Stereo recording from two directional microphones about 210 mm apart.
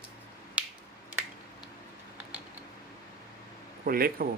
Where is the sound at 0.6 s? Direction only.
5° right (ahead or behind).